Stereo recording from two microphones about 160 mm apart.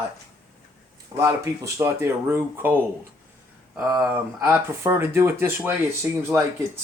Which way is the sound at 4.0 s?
15° right (ahead or behind).